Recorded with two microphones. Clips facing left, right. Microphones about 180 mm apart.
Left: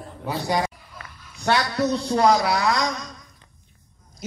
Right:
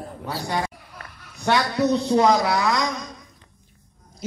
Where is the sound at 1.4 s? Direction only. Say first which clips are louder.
Right 1 dB; 20° right (ahead or behind).